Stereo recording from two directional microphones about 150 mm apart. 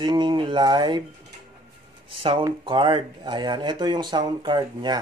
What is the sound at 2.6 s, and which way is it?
Speech, 35° right (ahead or behind).